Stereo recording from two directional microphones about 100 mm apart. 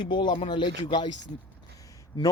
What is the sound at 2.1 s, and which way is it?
Speech, 45° left (ahead or behind).